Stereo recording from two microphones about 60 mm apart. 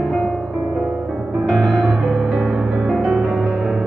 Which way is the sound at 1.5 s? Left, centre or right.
Centre.